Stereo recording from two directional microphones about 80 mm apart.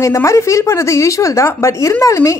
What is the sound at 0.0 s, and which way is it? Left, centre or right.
A woman's voice, left.